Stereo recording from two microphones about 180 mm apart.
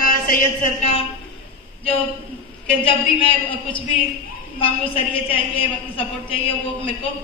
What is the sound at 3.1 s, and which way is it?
A woman's voice, 30° left (ahead or behind).